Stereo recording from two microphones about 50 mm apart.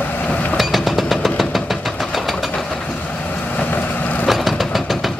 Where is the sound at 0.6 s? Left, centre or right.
Centre.